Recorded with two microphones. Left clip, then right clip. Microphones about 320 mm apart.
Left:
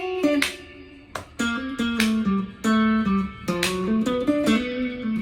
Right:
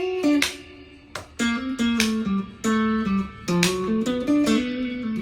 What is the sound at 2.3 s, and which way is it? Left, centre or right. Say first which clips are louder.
Music: left 1 dB; centre.